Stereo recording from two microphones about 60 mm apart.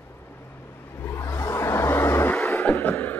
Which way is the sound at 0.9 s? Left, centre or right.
Left.